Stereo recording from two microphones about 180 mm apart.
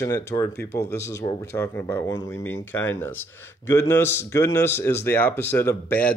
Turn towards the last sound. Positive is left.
turn(degrees=10)  # may be behind; listen again after turning